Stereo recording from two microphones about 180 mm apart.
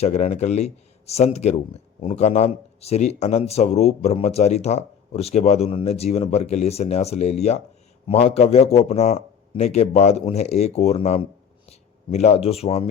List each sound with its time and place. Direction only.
0.0 s speech: 40° left (ahead or behind)